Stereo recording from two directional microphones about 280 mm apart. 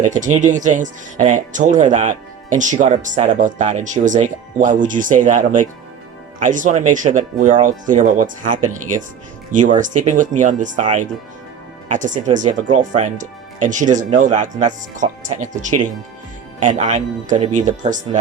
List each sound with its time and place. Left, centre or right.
0.0 s speech: right